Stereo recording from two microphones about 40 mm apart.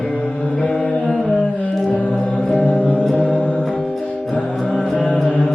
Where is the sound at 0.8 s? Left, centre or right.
Left.